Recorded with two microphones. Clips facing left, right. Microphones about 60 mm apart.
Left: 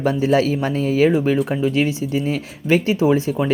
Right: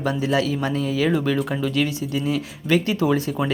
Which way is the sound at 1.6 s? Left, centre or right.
Left.